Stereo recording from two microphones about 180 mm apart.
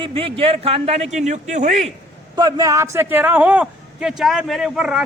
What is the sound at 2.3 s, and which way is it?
A man's voice, 20° right (ahead or behind).